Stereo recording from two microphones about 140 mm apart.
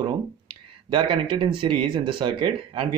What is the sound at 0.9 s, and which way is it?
Speech, 40° right (ahead or behind).